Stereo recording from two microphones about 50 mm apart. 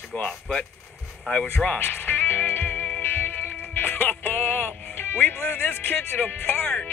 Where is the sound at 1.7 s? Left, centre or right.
Left.